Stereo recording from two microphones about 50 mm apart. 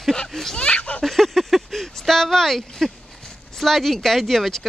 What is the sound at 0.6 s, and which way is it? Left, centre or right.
Speech, left.